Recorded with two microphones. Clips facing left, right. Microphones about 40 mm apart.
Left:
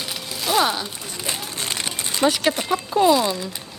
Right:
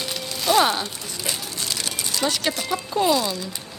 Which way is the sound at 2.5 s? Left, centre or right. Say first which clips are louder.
Left 3 dB; left.